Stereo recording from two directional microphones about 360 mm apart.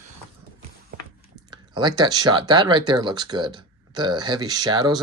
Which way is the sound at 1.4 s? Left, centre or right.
Centre.